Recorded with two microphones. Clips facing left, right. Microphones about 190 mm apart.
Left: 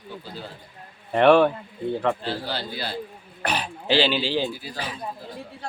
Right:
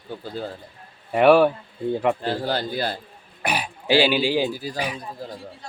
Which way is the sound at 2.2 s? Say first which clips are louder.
Right 5 dB; 45° right (ahead or behind).